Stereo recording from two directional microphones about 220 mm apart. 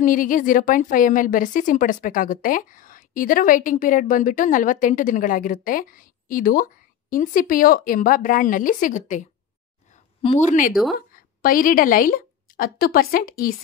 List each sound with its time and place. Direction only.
0.0 s a woman's voice: 40° left (ahead or behind)
10.2 s a woman's voice: 30° left (ahead or behind)
10.7 s speech: centre (ahead or behind)
11.1 s a woman's voice: 40° left (ahead or behind)